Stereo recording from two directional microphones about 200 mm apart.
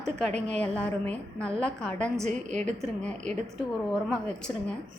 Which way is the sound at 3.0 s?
5° left (ahead or behind).